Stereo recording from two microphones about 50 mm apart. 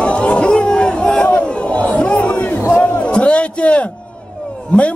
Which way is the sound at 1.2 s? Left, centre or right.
Left.